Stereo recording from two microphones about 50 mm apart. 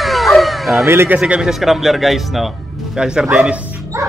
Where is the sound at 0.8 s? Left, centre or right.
Right.